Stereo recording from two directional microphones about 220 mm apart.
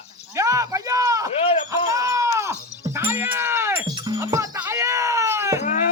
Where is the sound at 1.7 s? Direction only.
15° right (ahead or behind).